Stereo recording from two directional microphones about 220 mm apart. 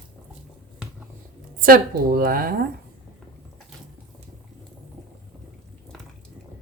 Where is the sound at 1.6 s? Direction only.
40° right (ahead or behind).